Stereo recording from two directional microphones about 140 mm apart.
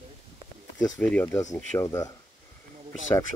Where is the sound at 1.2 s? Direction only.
25° left (ahead or behind).